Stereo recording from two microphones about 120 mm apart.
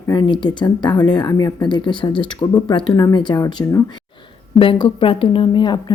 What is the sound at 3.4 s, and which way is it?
Speech, 30° left (ahead or behind).